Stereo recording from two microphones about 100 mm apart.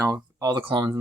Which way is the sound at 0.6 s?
55° right (ahead or behind).